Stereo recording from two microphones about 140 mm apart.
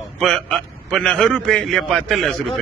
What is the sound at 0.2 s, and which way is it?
A man's voice, 5° left (ahead or behind).